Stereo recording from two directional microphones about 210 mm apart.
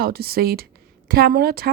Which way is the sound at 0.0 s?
45° right (ahead or behind).